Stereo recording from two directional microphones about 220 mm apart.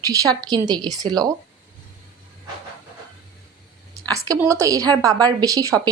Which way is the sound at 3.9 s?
15° right (ahead or behind).